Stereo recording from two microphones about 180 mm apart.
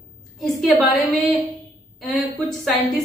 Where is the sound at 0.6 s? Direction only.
Centre (ahead or behind).